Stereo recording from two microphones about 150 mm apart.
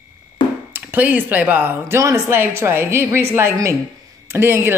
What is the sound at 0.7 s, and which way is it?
Speech, 10° right (ahead or behind).